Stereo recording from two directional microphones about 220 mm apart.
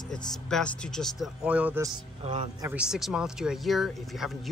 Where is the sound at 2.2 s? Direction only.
30° right (ahead or behind).